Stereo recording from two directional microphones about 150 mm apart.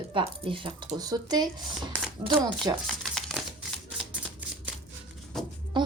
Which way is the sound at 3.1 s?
5° left (ahead or behind).